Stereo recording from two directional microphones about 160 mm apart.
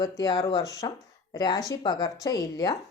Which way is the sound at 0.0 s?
20° left (ahead or behind).